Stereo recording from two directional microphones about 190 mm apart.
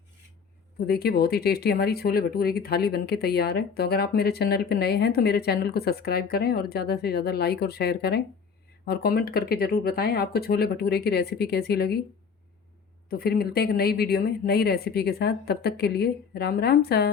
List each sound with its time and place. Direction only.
0.9 s speech: 55° left (ahead or behind)
13.1 s speech: 55° left (ahead or behind)